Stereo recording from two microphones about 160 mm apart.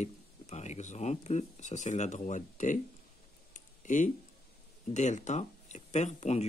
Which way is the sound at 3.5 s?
55° left (ahead or behind).